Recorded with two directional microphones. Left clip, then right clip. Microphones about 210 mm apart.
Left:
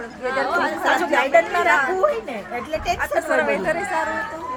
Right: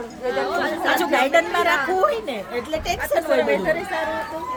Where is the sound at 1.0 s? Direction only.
55° right (ahead or behind).